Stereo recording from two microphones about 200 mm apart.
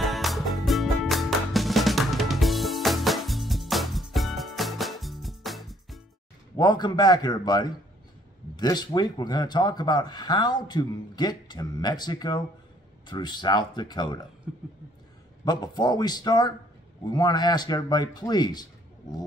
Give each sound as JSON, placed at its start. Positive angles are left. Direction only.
{"t": 0.0, "sound": "music", "side_deg": 0}
{"t": 6.5, "sound": "speech", "side_deg": 20}
{"t": 14.5, "sound": "speech", "side_deg": 0}
{"t": 15.4, "sound": "speech", "side_deg": 20}